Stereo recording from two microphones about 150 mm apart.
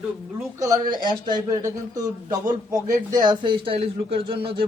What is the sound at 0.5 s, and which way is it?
Speech, 20° right (ahead or behind).